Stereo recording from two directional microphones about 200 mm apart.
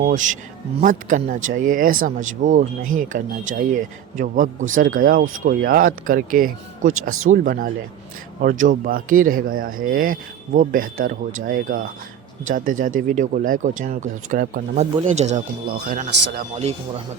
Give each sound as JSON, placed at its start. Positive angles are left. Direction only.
{"t": 0.0, "sound": "speech", "side_deg": -40}
{"t": 15.6, "sound": "speech", "side_deg": -50}